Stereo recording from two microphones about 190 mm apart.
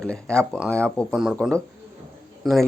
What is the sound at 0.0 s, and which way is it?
Speech, 5° left (ahead or behind).